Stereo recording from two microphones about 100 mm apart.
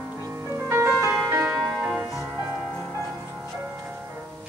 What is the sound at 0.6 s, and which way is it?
Music, 25° right (ahead or behind).